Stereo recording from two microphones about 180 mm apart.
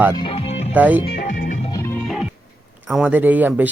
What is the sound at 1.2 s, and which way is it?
Music, 45° left (ahead or behind).